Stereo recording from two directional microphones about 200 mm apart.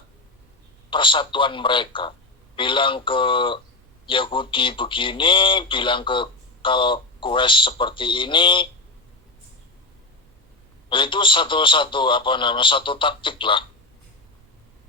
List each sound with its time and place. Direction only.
0.9 s speech: 25° left (ahead or behind)
10.8 s speech: 25° left (ahead or behind)